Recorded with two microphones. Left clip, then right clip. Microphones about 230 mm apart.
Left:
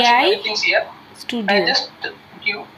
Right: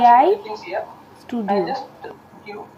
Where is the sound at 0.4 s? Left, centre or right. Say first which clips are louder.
Left 10 dB; left.